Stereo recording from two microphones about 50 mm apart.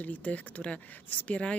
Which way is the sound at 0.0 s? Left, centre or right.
Left.